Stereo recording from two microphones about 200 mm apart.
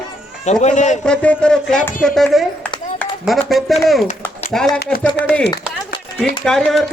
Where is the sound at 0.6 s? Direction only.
35° left (ahead or behind).